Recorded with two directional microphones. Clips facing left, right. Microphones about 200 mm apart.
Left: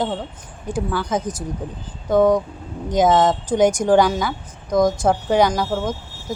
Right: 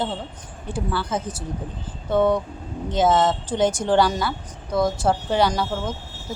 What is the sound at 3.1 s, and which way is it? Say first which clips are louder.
Speech: left 2 dB; 5° right (ahead or behind).